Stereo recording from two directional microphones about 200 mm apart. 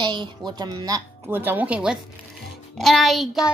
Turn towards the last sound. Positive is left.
turn(degrees=0)  # may be behind; listen again after turning